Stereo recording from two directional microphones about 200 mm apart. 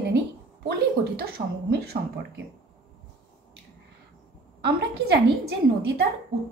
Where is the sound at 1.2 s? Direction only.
55° right (ahead or behind).